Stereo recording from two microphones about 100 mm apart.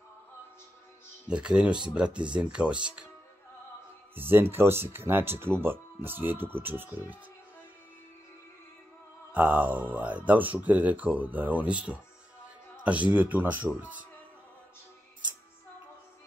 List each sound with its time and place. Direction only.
1.2 s speech: 10° right (ahead or behind)
4.1 s speech: 20° right (ahead or behind)
9.3 s speech: 15° right (ahead or behind)